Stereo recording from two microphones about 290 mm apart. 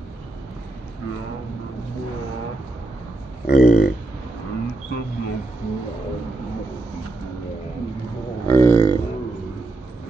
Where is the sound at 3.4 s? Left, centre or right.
Left.